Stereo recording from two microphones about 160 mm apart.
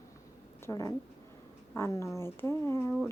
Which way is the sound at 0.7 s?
20° left (ahead or behind).